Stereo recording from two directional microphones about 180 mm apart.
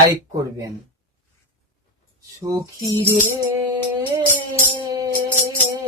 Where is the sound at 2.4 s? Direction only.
20° right (ahead or behind).